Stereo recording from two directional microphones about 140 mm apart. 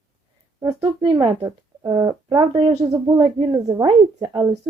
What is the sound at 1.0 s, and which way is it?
A woman's voice, 35° right (ahead or behind).